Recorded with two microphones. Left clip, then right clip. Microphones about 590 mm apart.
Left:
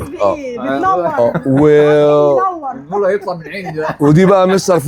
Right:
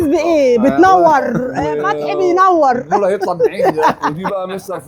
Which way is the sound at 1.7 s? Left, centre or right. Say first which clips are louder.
Left 11 dB; left.